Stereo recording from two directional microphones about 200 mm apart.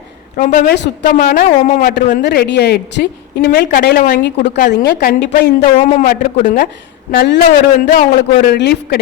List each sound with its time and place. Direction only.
0.3 s a woman's voice: 45° left (ahead or behind)
4.2 s a woman's voice: 50° left (ahead or behind)
5.6 s a woman's voice: 40° left (ahead or behind)